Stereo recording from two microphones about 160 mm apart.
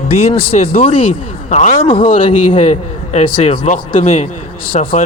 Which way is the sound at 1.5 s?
45° left (ahead or behind).